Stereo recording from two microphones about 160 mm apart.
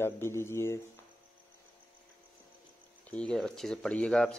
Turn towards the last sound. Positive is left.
turn(degrees=5)  # may be behind; listen again after turning